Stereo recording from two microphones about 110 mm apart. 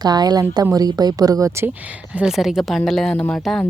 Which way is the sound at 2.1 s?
5° right (ahead or behind).